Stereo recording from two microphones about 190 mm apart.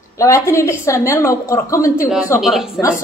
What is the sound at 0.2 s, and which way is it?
A woman's voice, 15° left (ahead or behind).